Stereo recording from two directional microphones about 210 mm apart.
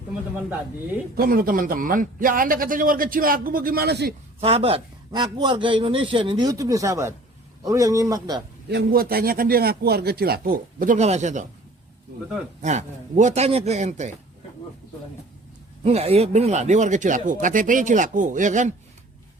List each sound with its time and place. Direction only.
1.1 s a man's voice: 45° right (ahead or behind)
4.4 s a man's voice: 30° right (ahead or behind)
8.7 s a man's voice: 45° right (ahead or behind)
12.6 s speech: 35° right (ahead or behind)
15.8 s speech: 30° right (ahead or behind)